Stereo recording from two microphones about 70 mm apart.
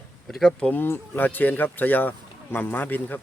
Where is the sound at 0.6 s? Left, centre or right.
Left.